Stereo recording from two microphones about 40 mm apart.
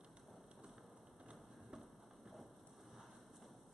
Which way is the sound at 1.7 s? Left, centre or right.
Centre.